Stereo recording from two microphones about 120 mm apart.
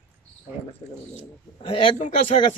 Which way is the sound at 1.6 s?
45° left (ahead or behind).